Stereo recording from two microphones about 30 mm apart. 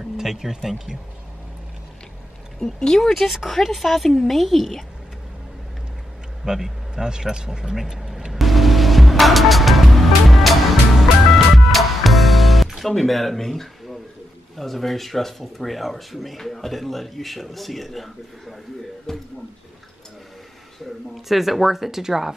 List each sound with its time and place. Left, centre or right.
0.0 s speech: centre
2.6 s speech: centre
3.1 s speech: centre
6.4 s speech: right
7.7 s speech: centre
8.3 s music: centre
14.6 s speech: centre
21.3 s speech: centre